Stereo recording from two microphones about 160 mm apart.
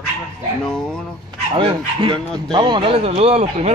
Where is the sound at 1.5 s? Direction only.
35° right (ahead or behind).